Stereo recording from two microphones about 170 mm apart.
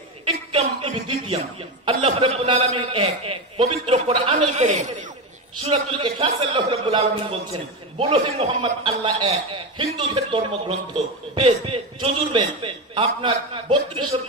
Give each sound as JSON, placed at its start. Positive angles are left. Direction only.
{"t": 0.5, "sound": "a sound", "side_deg": -30}
{"t": 1.9, "sound": "a man's voice", "side_deg": -30}
{"t": 5.6, "sound": "a man's voice", "side_deg": -30}